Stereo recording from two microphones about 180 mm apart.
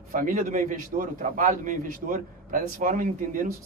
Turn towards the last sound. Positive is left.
turn(degrees=-50)  # may be behind; listen again after turning